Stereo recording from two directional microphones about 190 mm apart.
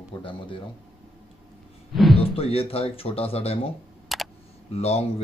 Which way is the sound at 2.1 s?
30° left (ahead or behind).